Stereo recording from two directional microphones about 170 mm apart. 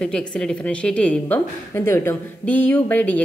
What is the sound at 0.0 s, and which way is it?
A woman's voice, 5° left (ahead or behind).